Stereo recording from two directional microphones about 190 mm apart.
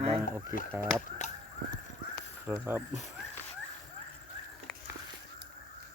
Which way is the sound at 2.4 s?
10° right (ahead or behind).